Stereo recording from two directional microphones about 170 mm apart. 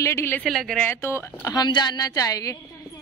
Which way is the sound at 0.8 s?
15° left (ahead or behind).